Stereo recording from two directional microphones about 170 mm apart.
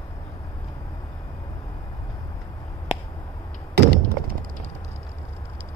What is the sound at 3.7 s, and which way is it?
Thunk, 70° right (ahead or behind).